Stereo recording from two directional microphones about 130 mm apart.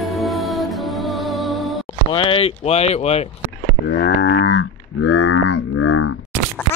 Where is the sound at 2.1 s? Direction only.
45° left (ahead or behind).